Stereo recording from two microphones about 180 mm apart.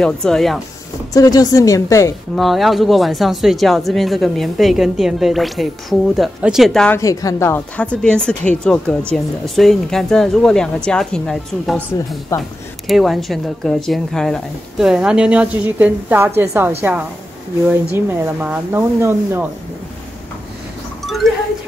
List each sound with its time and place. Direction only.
0.0 s speech: 5° left (ahead or behind)
1.1 s a woman's voice: 20° left (ahead or behind)
2.3 s speech: centre (ahead or behind)
7.0 s speech: 20° left (ahead or behind); by 16.7 s 10° right (ahead or behind)
17.9 s speech: 10° right (ahead or behind)
21.0 s a sound: centre (ahead or behind)